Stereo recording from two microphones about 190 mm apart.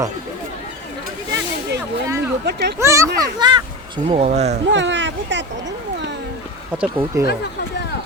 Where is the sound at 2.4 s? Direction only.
60° right (ahead or behind).